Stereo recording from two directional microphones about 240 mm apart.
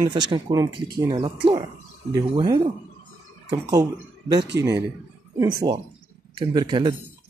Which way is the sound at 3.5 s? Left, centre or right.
Centre.